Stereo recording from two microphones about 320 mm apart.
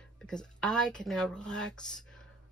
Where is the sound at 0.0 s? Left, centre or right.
Centre.